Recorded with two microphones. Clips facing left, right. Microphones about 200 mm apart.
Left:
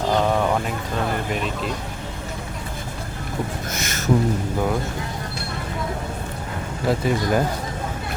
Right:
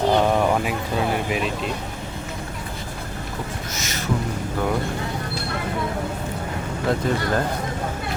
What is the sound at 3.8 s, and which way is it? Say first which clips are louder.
Speech: left 3 dB; 50° left (ahead or behind).